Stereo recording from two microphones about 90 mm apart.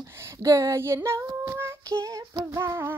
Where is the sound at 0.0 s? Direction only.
30° right (ahead or behind).